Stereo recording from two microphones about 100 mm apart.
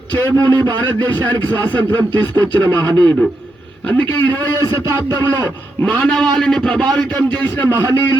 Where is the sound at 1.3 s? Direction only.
15° left (ahead or behind).